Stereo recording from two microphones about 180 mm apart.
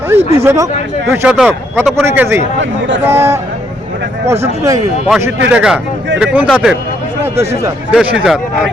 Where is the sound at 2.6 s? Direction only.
90° right.